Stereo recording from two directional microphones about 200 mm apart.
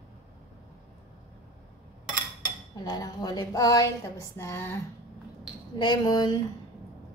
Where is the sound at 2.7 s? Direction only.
20° left (ahead or behind).